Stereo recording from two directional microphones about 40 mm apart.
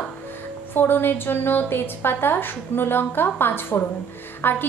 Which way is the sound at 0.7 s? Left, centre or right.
Left.